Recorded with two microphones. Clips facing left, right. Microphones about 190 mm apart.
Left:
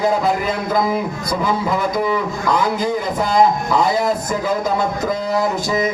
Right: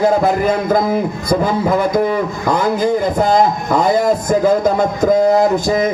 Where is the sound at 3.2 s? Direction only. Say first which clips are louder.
Right 2 dB; 50° right (ahead or behind).